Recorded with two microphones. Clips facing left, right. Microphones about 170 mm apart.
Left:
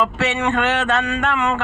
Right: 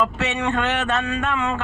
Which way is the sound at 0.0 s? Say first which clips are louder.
Left 2 dB; 85° left.